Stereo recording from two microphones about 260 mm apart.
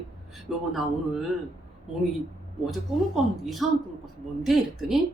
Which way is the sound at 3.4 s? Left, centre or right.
Centre.